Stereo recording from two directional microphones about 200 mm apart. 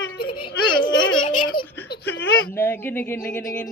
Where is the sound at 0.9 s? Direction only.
75° left (ahead or behind).